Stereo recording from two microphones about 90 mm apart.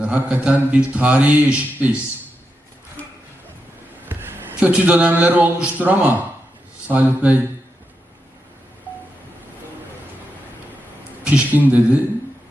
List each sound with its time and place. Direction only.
0.0 s speech: 15° right (ahead or behind)
4.1 s a sound: 25° right (ahead or behind)
4.7 s speech: 15° right (ahead or behind)
11.2 s speech: 15° right (ahead or behind)